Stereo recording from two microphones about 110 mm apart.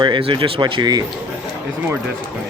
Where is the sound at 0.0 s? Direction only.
45° right (ahead or behind).